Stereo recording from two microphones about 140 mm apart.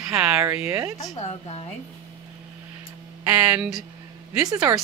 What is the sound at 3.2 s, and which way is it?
Speech, 10° right (ahead or behind).